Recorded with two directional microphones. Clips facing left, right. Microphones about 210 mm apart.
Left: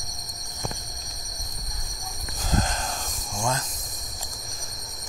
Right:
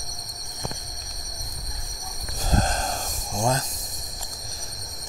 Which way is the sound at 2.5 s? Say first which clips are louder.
Right 2 dB; 40° right (ahead or behind).